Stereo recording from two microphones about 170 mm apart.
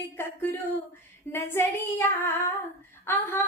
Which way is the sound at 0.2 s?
15° left (ahead or behind).